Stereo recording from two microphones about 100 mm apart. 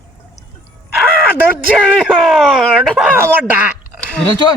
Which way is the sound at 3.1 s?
20° right (ahead or behind).